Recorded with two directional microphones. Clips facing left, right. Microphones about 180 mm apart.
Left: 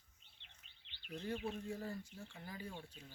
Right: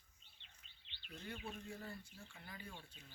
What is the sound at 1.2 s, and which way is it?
Speech, 30° left (ahead or behind).